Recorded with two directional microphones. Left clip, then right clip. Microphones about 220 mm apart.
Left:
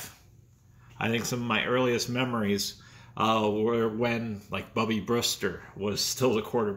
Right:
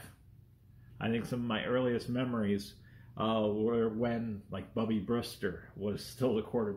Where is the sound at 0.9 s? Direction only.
40° left (ahead or behind).